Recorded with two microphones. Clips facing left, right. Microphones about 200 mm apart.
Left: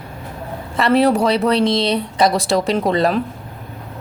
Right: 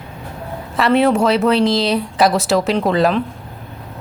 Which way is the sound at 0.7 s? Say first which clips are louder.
Even; centre (ahead or behind).